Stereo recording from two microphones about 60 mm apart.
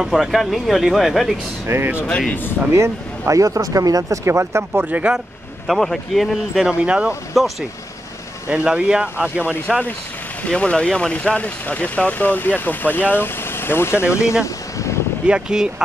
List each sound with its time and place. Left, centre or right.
0.0 s speech: centre
1.7 s speech: right
2.0 s speech: centre
2.7 s speech: right
4.2 s speech: right
4.8 s speech: right
5.7 s speech: centre
6.6 s speech: centre
8.6 s speech: centre
9.7 s speech: centre
10.5 s speech: centre; by 14.3 s left
14.4 s vehicle: left
15.2 s speech: centre